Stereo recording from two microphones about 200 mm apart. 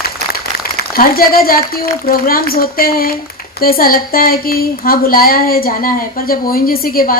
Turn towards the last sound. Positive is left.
turn(degrees=45)  # may be behind; listen again after turning